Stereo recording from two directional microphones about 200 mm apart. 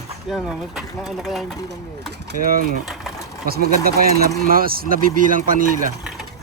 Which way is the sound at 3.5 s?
50° right (ahead or behind).